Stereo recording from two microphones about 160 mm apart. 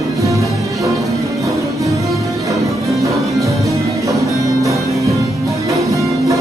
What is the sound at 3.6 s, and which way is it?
Music, 20° right (ahead or behind).